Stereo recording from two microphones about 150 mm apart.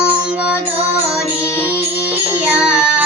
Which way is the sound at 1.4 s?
15° left (ahead or behind).